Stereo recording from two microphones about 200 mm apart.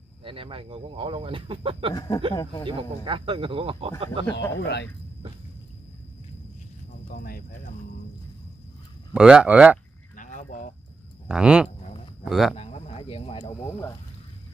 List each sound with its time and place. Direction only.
0.2 s speech: 25° right (ahead or behind)
2.0 s speech: 20° left (ahead or behind)
2.6 s speech: 25° right (ahead or behind)
4.6 s speech: 60° left (ahead or behind)
9.1 s speech: 5° right (ahead or behind)
10.1 s a sound: 40° left (ahead or behind)
11.2 s speech: 5° right (ahead or behind)
12.5 s speech: 30° left (ahead or behind)